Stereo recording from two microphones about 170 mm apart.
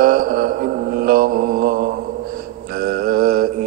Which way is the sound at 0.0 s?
55° right (ahead or behind).